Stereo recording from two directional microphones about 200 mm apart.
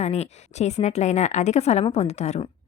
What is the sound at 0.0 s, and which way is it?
A woman's voice, 35° left (ahead or behind).